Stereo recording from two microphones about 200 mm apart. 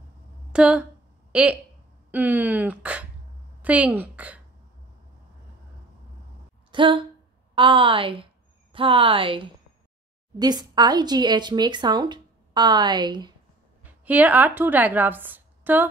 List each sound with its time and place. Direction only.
0.5 s a woman's voice: 5° right (ahead or behind)
6.7 s a sound: 25° right (ahead or behind)
7.5 s a woman's voice: 25° right (ahead or behind)
13.8 s a woman's voice: 10° right (ahead or behind)